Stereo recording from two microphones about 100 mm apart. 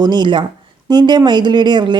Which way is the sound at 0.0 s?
50° right (ahead or behind).